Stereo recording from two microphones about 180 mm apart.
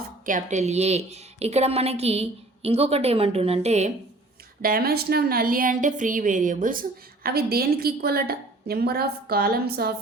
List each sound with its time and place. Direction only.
0.3 s a woman's voice: 45° right (ahead or behind)
4.6 s a woman's voice: 55° right (ahead or behind)